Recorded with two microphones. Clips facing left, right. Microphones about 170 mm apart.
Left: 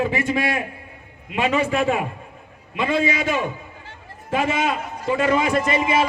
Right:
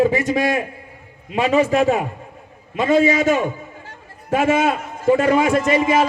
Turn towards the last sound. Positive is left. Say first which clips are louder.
# right 4 dB
turn(degrees=-45)  # may be behind; listen again after turning